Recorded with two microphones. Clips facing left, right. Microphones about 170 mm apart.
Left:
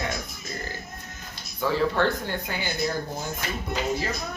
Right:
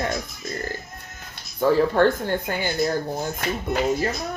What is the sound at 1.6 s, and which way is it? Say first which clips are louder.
Speech: right 6 dB; 45° right (ahead or behind).